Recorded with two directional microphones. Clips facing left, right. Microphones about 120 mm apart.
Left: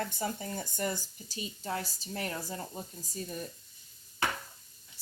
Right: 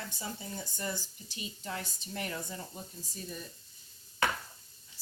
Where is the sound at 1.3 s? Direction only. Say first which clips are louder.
Left 4 dB; 35° left (ahead or behind).